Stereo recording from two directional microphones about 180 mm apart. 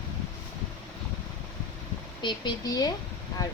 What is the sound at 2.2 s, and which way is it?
Speech, 25° left (ahead or behind).